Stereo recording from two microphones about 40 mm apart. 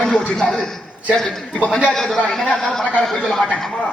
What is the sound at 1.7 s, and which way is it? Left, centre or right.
Speech, left.